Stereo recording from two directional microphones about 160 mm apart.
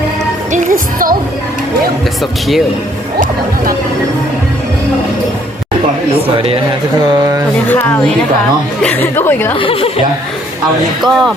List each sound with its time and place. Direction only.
0.5 s music: 55° right (ahead or behind)
6.3 s speech: 35° right (ahead or behind)
7.7 s speech: 15° left (ahead or behind)
9.6 s speech: 35° left (ahead or behind)
11.1 s speech: centre (ahead or behind)